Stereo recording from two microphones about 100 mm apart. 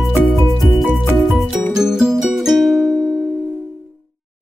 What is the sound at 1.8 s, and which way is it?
Music, 5° right (ahead or behind).